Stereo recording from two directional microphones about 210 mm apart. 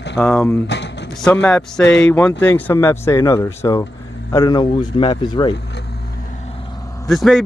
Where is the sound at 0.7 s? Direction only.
55° left (ahead or behind).